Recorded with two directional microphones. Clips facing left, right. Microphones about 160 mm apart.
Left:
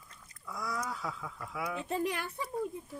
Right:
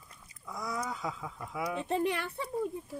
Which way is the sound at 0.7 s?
20° right (ahead or behind).